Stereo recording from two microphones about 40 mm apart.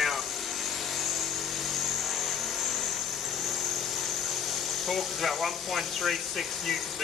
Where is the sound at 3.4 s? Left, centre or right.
Centre.